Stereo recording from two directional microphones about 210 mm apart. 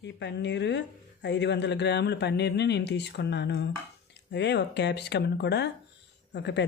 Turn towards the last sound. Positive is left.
turn(degrees=55)  # may be behind; listen again after turning